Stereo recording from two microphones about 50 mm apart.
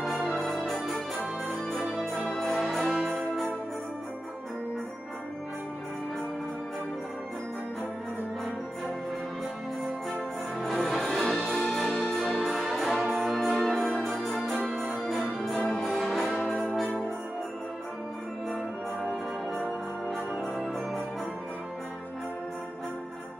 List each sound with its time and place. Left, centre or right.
1.9 s music: centre
2.8 s music: centre
3.1 s music: centre
10.6 s music: centre
14.0 s organ: centre
15.7 s music: centre
20.5 s music: centre